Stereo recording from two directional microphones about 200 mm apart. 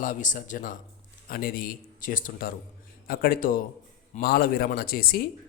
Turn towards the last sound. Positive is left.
turn(degrees=50)  # may be behind; listen again after turning